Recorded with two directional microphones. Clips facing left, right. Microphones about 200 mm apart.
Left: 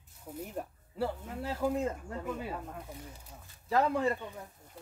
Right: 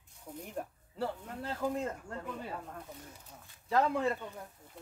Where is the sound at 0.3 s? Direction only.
5° left (ahead or behind).